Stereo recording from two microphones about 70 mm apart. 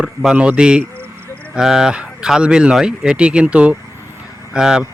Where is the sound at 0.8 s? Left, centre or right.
Right.